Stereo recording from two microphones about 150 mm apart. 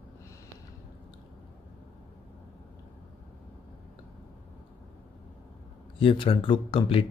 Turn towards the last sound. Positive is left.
turn(degrees=35)  # may be behind; listen again after turning